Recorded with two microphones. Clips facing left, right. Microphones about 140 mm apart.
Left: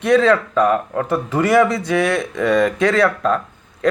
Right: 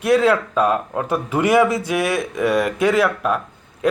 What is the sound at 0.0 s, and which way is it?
Speech, 10° right (ahead or behind).